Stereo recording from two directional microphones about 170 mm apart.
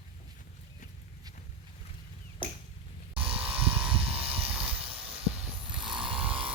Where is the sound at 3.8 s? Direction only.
35° right (ahead or behind).